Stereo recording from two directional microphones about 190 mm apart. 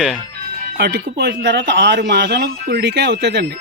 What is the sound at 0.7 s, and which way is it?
A man's voice, 60° right (ahead or behind).